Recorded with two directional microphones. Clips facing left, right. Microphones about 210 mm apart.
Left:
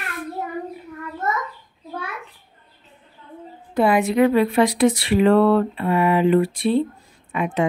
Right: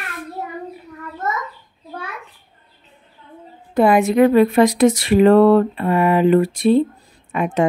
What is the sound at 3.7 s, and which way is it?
Speech, 45° right (ahead or behind).